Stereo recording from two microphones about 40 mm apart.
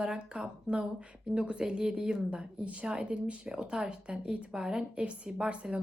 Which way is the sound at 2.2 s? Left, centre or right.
Right.